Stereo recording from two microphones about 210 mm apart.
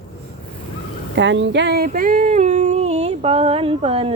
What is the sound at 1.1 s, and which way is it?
Female singing, 60° right (ahead or behind).